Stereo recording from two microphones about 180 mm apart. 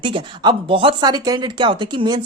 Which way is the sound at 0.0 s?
25° right (ahead or behind).